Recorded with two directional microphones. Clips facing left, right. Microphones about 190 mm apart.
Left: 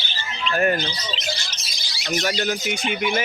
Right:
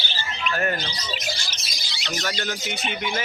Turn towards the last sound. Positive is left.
turn(degrees=10)  # may be behind; listen again after turning